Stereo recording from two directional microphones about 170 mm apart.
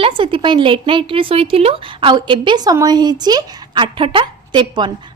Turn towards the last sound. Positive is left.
turn(degrees=-25)  # may be behind; listen again after turning